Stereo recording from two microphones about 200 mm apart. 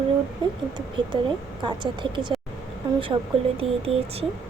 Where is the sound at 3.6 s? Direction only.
30° right (ahead or behind).